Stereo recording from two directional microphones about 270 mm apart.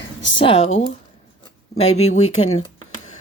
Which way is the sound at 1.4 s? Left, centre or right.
Centre.